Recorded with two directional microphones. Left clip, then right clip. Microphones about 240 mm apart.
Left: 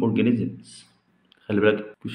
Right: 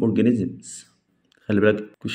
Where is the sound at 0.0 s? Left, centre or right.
Right.